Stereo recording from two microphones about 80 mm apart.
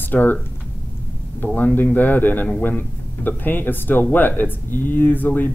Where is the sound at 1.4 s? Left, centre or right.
Left.